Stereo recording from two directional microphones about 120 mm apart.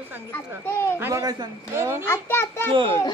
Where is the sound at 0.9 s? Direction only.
20° right (ahead or behind).